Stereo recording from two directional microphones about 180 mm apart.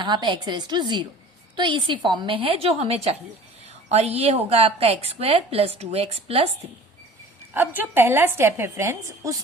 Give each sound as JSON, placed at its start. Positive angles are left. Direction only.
{"t": 0.0, "sound": "a woman's voice", "side_deg": -25}
{"t": 7.5, "sound": "a woman's voice", "side_deg": -10}